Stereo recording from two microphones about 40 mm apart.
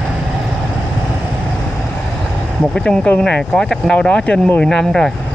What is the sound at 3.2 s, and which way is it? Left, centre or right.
Speech, left.